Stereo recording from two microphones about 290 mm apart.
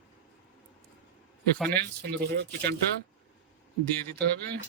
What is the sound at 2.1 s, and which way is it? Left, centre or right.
Speech, right.